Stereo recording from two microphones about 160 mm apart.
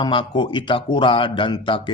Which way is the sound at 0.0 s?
30° left (ahead or behind).